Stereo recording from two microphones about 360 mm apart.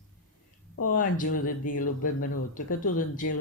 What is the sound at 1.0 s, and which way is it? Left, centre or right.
Speech, left.